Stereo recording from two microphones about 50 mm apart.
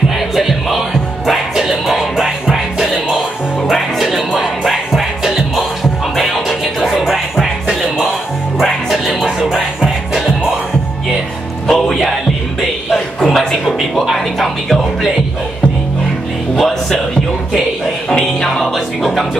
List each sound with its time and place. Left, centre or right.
0.4 s music: centre
8.5 s music: centre
11.7 s music: centre
14.0 s music: centre
16.5 s music: centre
18.6 s music: centre